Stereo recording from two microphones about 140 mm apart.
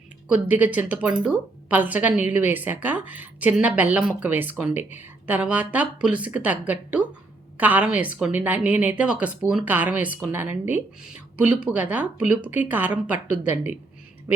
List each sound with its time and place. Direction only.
0.3 s a woman's voice: 10° right (ahead or behind)